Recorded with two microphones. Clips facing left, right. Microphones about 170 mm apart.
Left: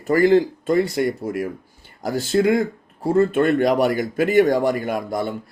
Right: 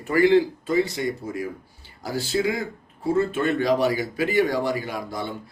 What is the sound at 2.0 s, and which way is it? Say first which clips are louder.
Speech: left 6 dB; 50° left (ahead or behind).